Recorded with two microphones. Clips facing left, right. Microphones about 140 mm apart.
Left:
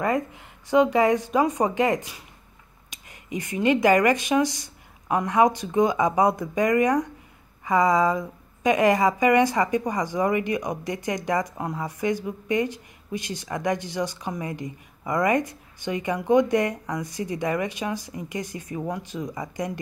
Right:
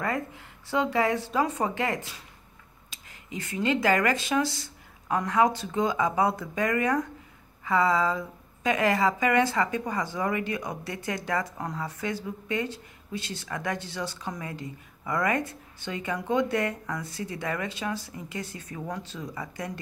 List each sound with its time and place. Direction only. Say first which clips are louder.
0.0 s a woman's voice: left 6 dB; 20° left (ahead or behind)